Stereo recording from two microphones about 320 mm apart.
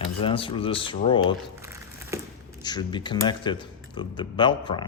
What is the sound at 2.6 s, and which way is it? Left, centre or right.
Speech, centre.